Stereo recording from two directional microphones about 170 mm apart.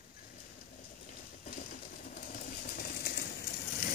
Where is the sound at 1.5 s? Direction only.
55° left (ahead or behind).